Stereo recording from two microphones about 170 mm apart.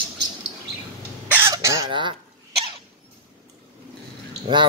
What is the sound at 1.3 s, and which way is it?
Cough, 15° right (ahead or behind).